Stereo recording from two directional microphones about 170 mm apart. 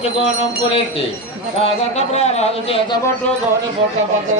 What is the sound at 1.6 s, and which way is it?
Speech, 40° left (ahead or behind).